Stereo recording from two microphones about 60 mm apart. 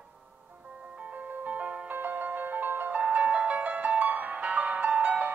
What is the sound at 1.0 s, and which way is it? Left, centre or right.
Music, right.